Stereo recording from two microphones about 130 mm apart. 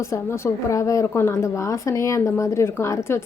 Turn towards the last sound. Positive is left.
turn(degrees=20)  # may be behind; listen again after turning